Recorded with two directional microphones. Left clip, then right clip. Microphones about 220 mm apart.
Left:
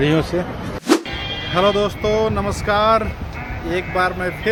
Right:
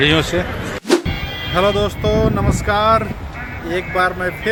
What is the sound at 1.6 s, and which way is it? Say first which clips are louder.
A man's voice: right 1 dB; centre (ahead or behind).